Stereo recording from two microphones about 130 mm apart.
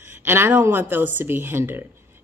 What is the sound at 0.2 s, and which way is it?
Speech, 15° right (ahead or behind).